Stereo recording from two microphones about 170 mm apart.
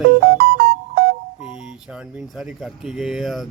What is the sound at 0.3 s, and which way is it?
Music, 65° right (ahead or behind).